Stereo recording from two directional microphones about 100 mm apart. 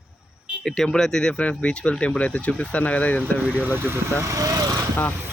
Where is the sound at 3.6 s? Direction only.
20° right (ahead or behind).